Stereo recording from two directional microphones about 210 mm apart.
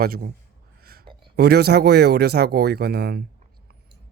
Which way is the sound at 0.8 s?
45° right (ahead or behind).